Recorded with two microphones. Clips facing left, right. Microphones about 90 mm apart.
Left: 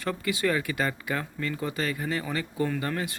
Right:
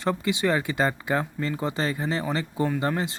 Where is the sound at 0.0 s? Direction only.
25° right (ahead or behind).